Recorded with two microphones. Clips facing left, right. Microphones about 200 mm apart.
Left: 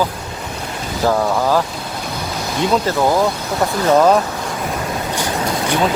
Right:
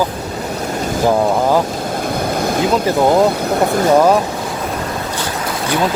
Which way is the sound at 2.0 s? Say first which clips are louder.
Right 7 dB; 55° right (ahead or behind).